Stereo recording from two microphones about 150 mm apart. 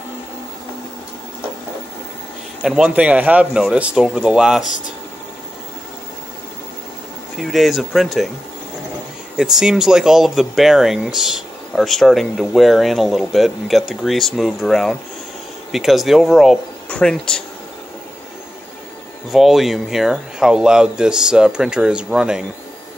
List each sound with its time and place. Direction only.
2.6 s speech: 5° right (ahead or behind)
7.3 s speech: centre (ahead or behind)
9.4 s speech: 5° right (ahead or behind)
19.3 s speech: centre (ahead or behind)